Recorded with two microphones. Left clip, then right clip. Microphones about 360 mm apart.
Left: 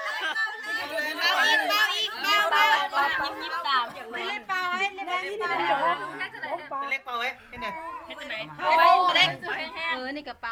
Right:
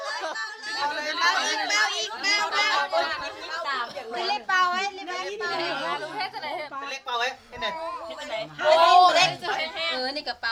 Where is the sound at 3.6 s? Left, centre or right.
Right.